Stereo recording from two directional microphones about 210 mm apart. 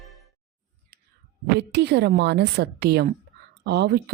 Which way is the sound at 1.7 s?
55° right (ahead or behind).